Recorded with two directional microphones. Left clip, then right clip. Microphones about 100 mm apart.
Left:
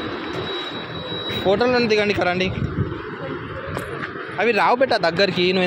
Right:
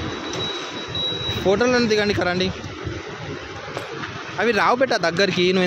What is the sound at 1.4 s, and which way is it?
Speech, 55° right (ahead or behind).